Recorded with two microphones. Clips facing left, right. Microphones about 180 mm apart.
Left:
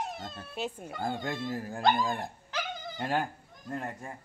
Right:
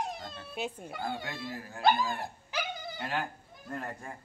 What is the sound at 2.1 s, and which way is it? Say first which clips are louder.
Dog: even; 10° right (ahead or behind).